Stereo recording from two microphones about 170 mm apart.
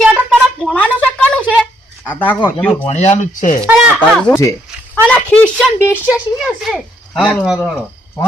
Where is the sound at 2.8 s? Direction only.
40° left (ahead or behind).